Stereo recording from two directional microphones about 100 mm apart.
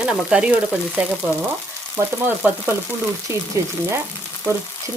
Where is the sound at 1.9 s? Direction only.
15° right (ahead or behind).